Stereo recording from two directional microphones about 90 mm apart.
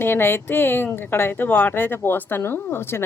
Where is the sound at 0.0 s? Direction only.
25° left (ahead or behind).